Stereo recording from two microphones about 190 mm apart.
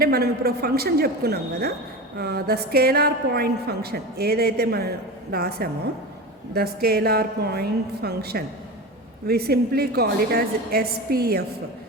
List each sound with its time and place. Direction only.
0.0 s a woman's voice: 55° right (ahead or behind)